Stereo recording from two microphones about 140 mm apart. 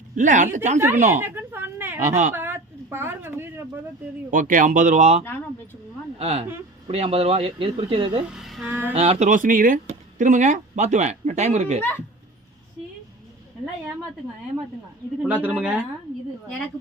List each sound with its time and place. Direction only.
0.2 s speech: 65° right (ahead or behind)
1.2 s a woman's voice: 15° right (ahead or behind)
2.0 s speech: 65° right (ahead or behind)
2.3 s a sound: 15° right (ahead or behind)
4.3 s speech: 70° right (ahead or behind); by 5.2 s 55° right (ahead or behind)
5.2 s speech: 15° left (ahead or behind)
6.1 s speech: 45° right (ahead or behind)
8.3 s speech: centre (ahead or behind)
8.6 s speech: 15° right (ahead or behind)
8.9 s speech: 45° right (ahead or behind)
11.8 s speech: 15° left (ahead or behind)
15.3 s speech: 10° right (ahead or behind)